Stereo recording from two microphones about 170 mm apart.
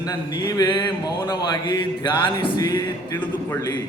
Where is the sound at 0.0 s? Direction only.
20° left (ahead or behind).